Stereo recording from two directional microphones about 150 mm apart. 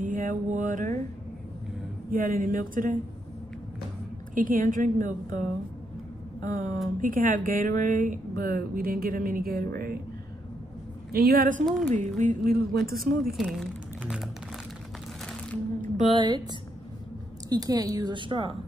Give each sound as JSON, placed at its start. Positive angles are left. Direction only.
{"t": 0.0, "sound": "mantra", "side_deg": -60}
{"t": 2.0, "sound": "a woman's voice", "side_deg": -65}
{"t": 4.4, "sound": "a woman's voice", "side_deg": -65}
{"t": 6.4, "sound": "a woman's voice", "side_deg": -60}
{"t": 11.1, "sound": "a woman's voice", "side_deg": -90}
{"t": 11.9, "sound": "a woman's voice", "side_deg": -55}
{"t": 13.4, "sound": "speech", "side_deg": -5}
{"t": 16.1, "sound": "a woman's voice", "side_deg": -30}
{"t": 17.5, "sound": "a woman's voice", "side_deg": -25}